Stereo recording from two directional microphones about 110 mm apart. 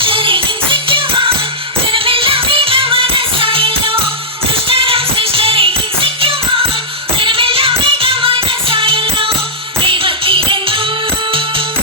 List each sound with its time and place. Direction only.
0.0 s music: 50° right (ahead or behind)